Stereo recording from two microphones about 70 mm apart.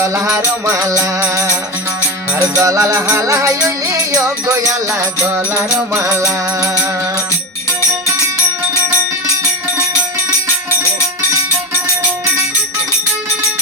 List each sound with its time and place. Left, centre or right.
0.0 s music: right
5.5 s music: right